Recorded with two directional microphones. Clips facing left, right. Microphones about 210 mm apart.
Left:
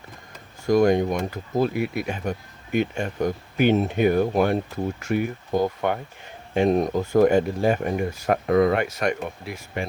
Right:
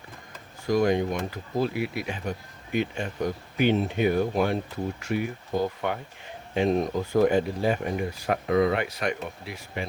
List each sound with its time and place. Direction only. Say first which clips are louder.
0.6 s speech: left 4 dB; 45° left (ahead or behind)